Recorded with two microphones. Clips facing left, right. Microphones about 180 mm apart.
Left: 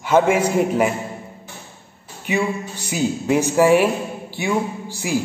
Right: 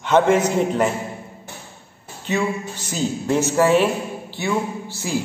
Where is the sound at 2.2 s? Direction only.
15° left (ahead or behind).